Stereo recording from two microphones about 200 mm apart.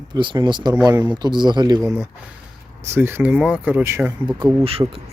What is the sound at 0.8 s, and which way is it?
Speech, 10° right (ahead or behind).